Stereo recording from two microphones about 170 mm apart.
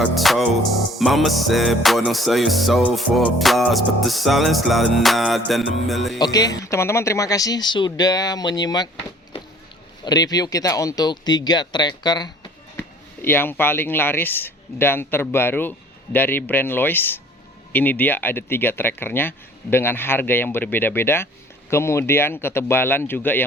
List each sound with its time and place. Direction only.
0.0 s music: centre (ahead or behind)
6.1 s speech: 25° left (ahead or behind)
10.0 s speech: 25° left (ahead or behind)
13.2 s speech: 10° left (ahead or behind)